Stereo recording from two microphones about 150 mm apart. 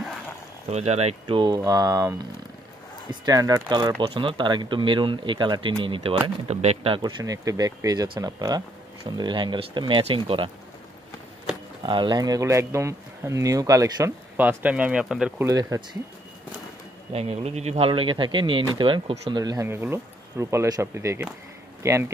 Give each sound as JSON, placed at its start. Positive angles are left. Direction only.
{"t": 0.7, "sound": "speech", "side_deg": -45}
{"t": 1.2, "sound": "speech", "side_deg": -30}
{"t": 6.2, "sound": "speech", "side_deg": -45}
{"t": 11.8, "sound": "speech", "side_deg": -30}
{"t": 14.3, "sound": "speech", "side_deg": -10}
{"t": 15.3, "sound": "speech", "side_deg": -20}
{"t": 17.1, "sound": "speech", "side_deg": -45}